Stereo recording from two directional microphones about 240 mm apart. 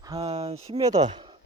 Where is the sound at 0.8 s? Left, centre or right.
Centre.